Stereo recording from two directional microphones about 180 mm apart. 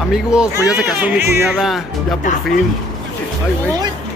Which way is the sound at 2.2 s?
45° left (ahead or behind).